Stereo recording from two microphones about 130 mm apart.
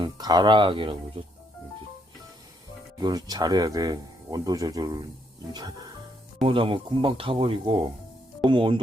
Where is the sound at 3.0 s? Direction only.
30° right (ahead or behind).